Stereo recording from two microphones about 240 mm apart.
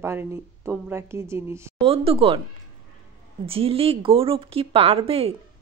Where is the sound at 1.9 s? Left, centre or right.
Right.